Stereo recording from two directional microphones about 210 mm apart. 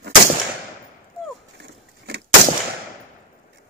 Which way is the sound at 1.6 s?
55° right (ahead or behind).